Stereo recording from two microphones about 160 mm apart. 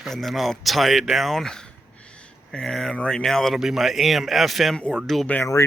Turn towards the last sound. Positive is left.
turn(degrees=20)  # may be behind; listen again after turning